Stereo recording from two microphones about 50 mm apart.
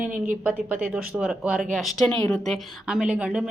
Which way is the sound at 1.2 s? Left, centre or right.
Right.